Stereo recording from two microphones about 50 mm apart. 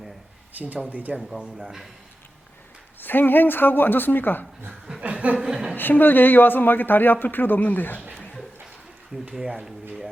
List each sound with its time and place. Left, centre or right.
0.6 s speech: right
1.2 s speech: centre
3.0 s speech: left
5.0 s chuckle: right
5.7 s speech: left
9.3 s speech: centre